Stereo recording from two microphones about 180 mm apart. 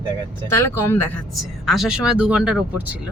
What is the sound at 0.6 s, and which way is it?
Speech, 15° left (ahead or behind).